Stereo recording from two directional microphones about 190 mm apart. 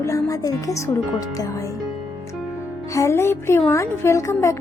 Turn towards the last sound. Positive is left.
turn(degrees=15)  # may be behind; listen again after turning